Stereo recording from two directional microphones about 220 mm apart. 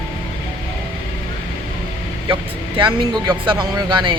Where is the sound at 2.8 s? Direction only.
20° right (ahead or behind).